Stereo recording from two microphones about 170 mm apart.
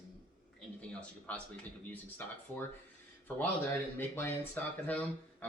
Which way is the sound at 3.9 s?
10° left (ahead or behind).